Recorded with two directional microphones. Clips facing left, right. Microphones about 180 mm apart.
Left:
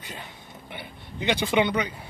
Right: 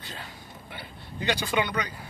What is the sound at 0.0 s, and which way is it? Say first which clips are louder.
A man's voice: left 1 dB; 15° left (ahead or behind).